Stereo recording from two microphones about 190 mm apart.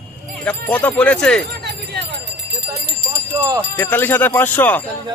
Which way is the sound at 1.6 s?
60° right (ahead or behind).